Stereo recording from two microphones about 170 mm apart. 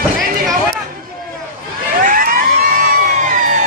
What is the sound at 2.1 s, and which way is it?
Vehicle, 50° right (ahead or behind).